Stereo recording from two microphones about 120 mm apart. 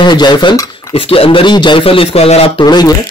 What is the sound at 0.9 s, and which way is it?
A man's voice, 50° left (ahead or behind).